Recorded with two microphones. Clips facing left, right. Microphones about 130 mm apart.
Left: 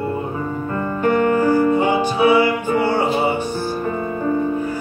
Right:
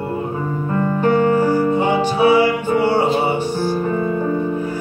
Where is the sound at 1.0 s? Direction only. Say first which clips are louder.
Even; 25° right (ahead or behind).